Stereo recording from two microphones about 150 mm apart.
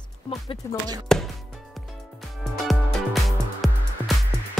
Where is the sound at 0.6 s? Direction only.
20° left (ahead or behind).